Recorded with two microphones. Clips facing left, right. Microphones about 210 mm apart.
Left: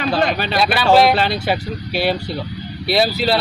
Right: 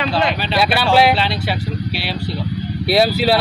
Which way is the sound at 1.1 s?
45° left (ahead or behind).